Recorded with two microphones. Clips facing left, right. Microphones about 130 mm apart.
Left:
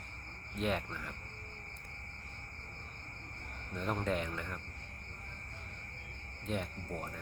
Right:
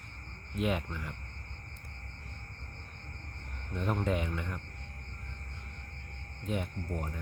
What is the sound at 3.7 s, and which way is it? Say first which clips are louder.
Speech: right 3 dB; 5° right (ahead or behind).